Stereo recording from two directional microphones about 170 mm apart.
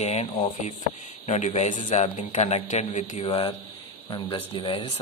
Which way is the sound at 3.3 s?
25° left (ahead or behind).